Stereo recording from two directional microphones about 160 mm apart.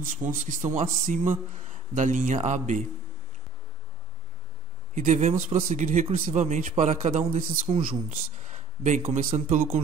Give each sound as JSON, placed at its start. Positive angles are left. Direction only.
{"t": 0.0, "sound": "speech", "side_deg": -55}
{"t": 4.9, "sound": "speech", "side_deg": -50}
{"t": 6.4, "sound": "speech", "side_deg": -40}